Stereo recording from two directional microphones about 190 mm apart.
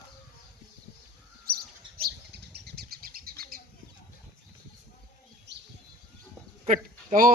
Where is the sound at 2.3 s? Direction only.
60° right (ahead or behind).